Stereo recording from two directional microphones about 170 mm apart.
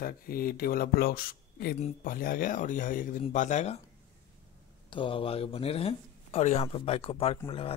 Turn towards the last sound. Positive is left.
turn(degrees=35)  # may be behind; listen again after turning